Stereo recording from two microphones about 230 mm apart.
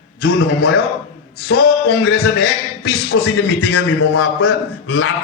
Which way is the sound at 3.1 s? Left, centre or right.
Left.